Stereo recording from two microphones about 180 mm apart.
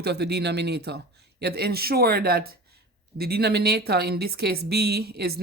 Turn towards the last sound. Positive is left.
turn(degrees=-60)  # may be behind; listen again after turning